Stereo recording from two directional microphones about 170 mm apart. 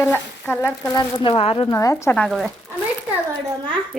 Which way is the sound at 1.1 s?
30° left (ahead or behind).